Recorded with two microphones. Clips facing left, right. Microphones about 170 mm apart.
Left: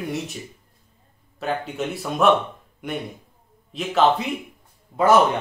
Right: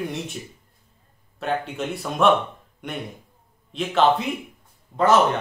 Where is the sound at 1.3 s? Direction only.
Centre (ahead or behind).